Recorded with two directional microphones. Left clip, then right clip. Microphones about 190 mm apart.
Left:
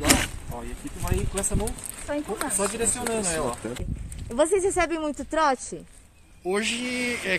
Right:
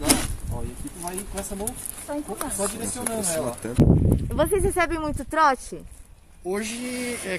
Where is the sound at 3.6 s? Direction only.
75° right (ahead or behind).